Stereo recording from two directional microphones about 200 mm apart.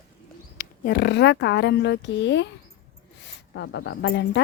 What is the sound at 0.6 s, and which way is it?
Speech, 50° left (ahead or behind).